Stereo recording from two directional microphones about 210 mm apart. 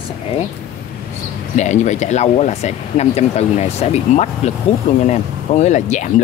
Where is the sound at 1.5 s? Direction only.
35° left (ahead or behind).